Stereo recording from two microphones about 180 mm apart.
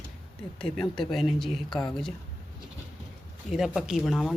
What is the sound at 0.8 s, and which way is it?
Speech, centre (ahead or behind).